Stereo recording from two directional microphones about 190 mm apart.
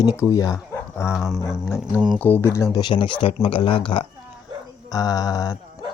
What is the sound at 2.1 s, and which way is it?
Speech, 10° left (ahead or behind).